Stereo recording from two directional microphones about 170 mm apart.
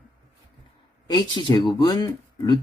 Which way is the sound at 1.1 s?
25° left (ahead or behind).